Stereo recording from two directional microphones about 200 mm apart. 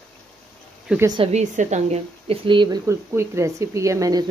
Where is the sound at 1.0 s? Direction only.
25° right (ahead or behind).